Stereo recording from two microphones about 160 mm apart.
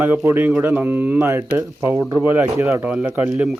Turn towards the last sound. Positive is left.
turn(degrees=-5)  # may be behind; listen again after turning